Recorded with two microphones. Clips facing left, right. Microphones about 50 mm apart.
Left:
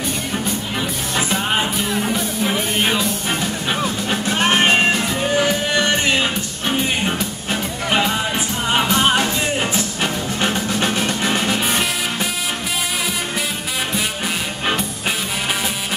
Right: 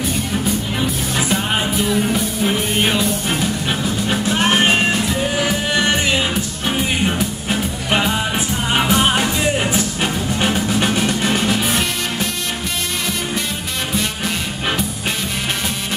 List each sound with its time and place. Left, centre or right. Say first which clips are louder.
0.3 s music: right 2 dB; centre
7.1 s music: right 2 dB; centre